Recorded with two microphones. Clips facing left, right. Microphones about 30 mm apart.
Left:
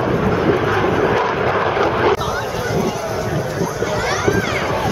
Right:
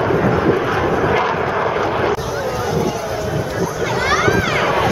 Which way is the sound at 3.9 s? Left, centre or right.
Right.